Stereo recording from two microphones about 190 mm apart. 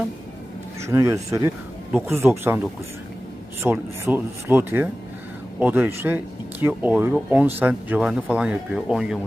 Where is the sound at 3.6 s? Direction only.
10° right (ahead or behind).